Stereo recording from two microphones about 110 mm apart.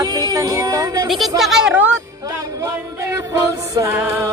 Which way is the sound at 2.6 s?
25° right (ahead or behind).